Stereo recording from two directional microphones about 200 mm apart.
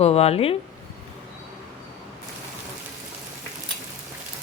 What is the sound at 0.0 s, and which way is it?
Speech, 30° left (ahead or behind).